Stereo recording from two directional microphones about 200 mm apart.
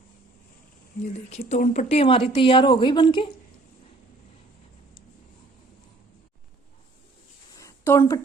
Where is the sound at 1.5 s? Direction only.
35° left (ahead or behind).